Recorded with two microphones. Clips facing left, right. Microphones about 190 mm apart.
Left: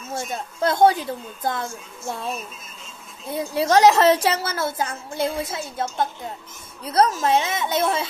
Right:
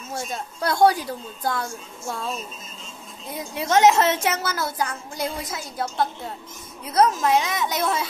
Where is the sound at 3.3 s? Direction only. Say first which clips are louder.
Left 4 dB; 30° left (ahead or behind).